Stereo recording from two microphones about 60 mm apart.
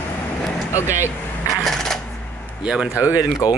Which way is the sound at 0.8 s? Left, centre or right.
Right.